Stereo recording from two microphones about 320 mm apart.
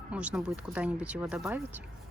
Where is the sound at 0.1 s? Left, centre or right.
Centre.